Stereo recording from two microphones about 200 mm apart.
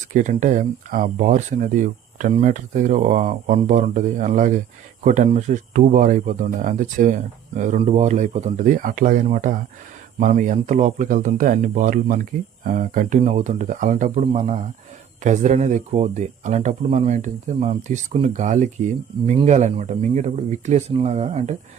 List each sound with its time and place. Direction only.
0.1 s speech: 40° right (ahead or behind)